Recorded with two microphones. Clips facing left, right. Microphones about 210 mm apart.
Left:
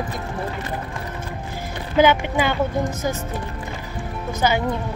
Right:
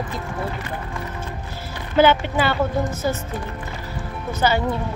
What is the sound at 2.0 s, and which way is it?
Speech, 15° left (ahead or behind).